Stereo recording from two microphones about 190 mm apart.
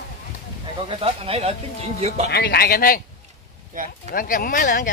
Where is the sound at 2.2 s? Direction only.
60° left (ahead or behind).